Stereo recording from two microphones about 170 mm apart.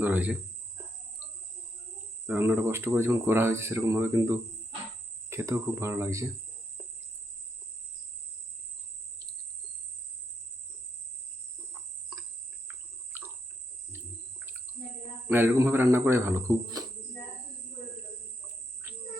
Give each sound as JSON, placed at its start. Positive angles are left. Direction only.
{"t": 0.0, "sound": "speech", "side_deg": -10}
{"t": 2.2, "sound": "speech", "side_deg": -10}
{"t": 13.1, "sound": "cricket", "side_deg": -15}
{"t": 13.9, "sound": "a sound", "side_deg": -15}
{"t": 15.3, "sound": "speech", "side_deg": -15}